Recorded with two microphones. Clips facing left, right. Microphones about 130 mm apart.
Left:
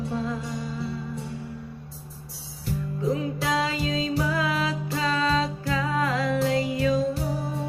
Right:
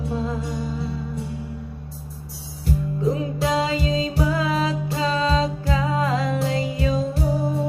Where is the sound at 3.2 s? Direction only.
20° right (ahead or behind).